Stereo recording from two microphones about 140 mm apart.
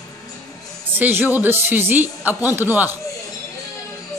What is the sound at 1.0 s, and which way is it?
A man's voice, 15° right (ahead or behind).